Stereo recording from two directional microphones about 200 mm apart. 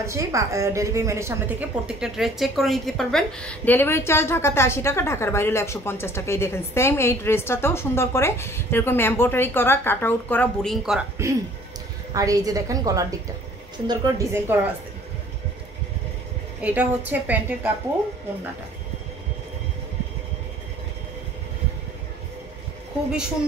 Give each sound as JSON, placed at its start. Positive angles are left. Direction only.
{"t": 0.0, "sound": "a woman's voice", "side_deg": -15}
{"t": 2.0, "sound": "a woman's voice", "side_deg": 0}
{"t": 11.2, "sound": "a woman's voice", "side_deg": -15}
{"t": 16.6, "sound": "a woman's voice", "side_deg": -10}